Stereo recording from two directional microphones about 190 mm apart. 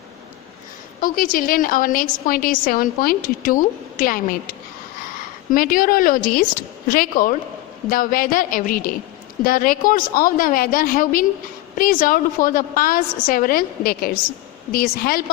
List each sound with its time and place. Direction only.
1.0 s a woman's voice: 50° left (ahead or behind)